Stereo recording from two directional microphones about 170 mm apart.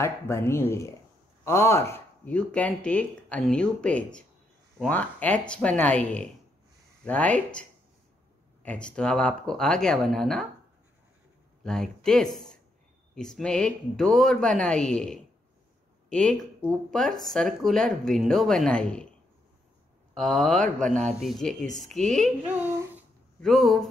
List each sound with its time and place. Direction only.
0.0 s speech: 15° left (ahead or behind)
8.6 s speech: 5° left (ahead or behind)
11.6 s speech: 5° left (ahead or behind)
20.2 s a child's voice: 5° left (ahead or behind)